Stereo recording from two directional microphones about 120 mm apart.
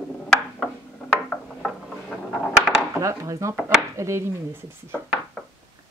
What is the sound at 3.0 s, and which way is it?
Speech, 25° right (ahead or behind).